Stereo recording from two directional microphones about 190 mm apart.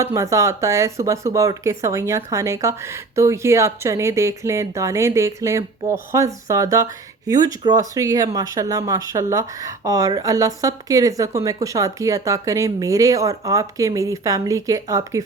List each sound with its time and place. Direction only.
0.0 s speech: 15° right (ahead or behind)